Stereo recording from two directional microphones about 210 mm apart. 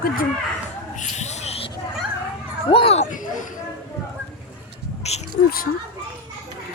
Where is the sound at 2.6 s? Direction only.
25° left (ahead or behind).